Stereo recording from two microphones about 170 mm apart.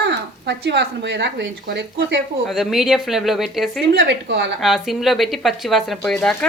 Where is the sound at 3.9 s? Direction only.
80° right.